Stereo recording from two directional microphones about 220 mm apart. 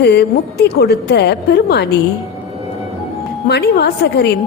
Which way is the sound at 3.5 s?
50° left (ahead or behind).